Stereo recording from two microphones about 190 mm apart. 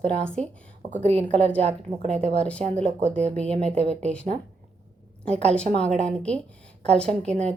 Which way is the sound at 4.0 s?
5° left (ahead or behind).